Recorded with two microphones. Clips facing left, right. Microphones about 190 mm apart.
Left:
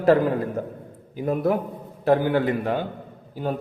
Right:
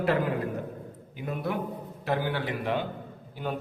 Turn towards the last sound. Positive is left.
turn(degrees=40)  # may be behind; listen again after turning